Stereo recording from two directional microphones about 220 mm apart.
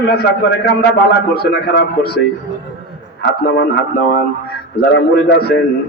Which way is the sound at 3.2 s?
50° left (ahead or behind).